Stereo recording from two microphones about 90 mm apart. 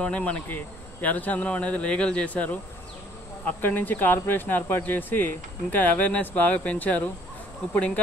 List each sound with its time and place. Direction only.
0.0 s speech: 15° left (ahead or behind)